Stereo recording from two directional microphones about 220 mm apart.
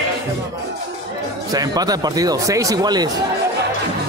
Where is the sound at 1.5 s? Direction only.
15° right (ahead or behind).